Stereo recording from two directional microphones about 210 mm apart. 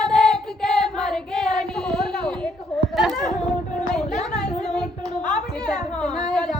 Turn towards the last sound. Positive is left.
turn(degrees=5)  # may be behind; listen again after turning